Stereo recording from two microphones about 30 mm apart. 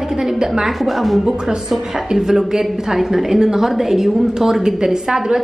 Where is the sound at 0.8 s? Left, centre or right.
Centre.